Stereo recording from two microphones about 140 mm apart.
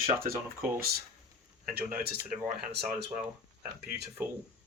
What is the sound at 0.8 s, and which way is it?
Speech, 90° right.